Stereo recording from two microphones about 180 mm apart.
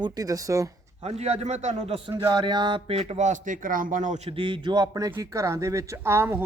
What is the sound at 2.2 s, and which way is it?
Speech, 25° right (ahead or behind).